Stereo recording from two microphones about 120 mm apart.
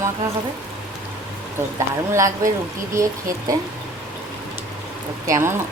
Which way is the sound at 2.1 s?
25° right (ahead or behind).